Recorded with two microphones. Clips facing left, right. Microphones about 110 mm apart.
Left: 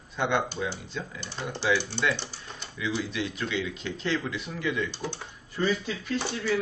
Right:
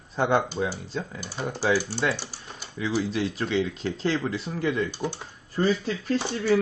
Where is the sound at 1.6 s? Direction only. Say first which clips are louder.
Right 2 dB; 40° right (ahead or behind).